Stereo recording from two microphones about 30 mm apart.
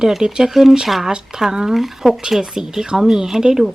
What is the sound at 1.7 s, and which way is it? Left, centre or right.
Speech, centre.